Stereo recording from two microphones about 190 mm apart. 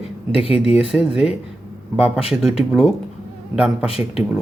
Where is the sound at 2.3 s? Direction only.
Centre (ahead or behind).